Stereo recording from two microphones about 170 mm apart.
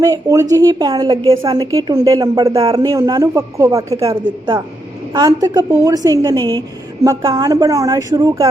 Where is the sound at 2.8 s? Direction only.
20° right (ahead or behind).